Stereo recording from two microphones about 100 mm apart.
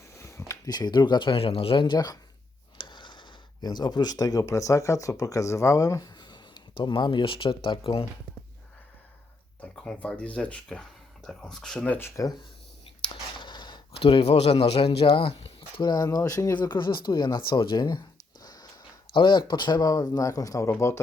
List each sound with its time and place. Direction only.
0.1 s speech: 30° left (ahead or behind); by 8.0 s 60° left (ahead or behind)
9.6 s speech: 10° left (ahead or behind)
11.9 s speech: 25° left (ahead or behind)
13.4 s a sound: 50° left (ahead or behind)
14.0 s speech: 70° left (ahead or behind)
15.8 s speech: 45° left (ahead or behind)
16.6 s speech: 50° left (ahead or behind)
18.4 s snort: 40° left (ahead or behind)
19.1 s speech: 50° left (ahead or behind); by 21.0 s 30° left (ahead or behind)